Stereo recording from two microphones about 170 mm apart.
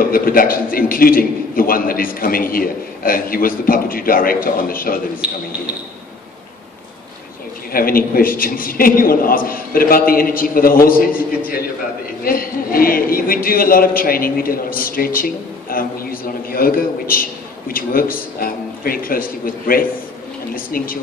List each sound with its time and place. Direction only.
0.0 s a man's voice: 60° left (ahead or behind)
5.2 s speech: 5° right (ahead or behind)
7.7 s a man's voice: 60° left (ahead or behind)